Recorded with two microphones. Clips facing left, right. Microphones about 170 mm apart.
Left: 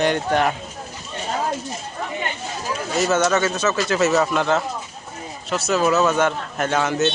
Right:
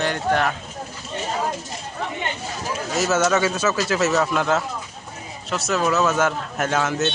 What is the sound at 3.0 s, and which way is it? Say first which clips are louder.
Speech: left 1 dB; 5° right (ahead or behind).